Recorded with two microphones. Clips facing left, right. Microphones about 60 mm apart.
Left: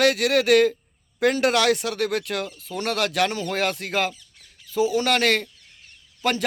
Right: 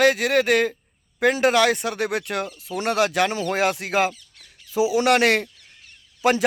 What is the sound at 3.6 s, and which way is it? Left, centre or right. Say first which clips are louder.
Speech: right 3 dB; centre.